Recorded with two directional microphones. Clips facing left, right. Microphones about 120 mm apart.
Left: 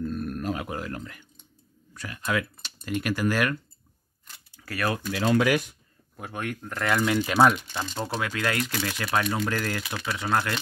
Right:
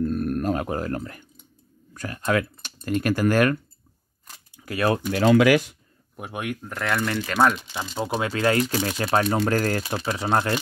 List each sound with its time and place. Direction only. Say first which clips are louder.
0.0 s speech: right 6 dB; 50° right (ahead or behind)
4.5 s speech: right 6 dB; 20° right (ahead or behind)
5.1 s speech: right 6 dB; 80° right
6.1 s speech: right 2 dB; 15° right (ahead or behind); by 7.6 s 5° left (ahead or behind)
7.6 s speech: right 2 dB; 10° right (ahead or behind)
8.2 s speech: right 7 dB; 30° right (ahead or behind)